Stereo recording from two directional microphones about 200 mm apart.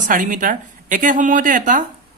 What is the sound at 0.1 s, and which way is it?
Speech, 40° right (ahead or behind).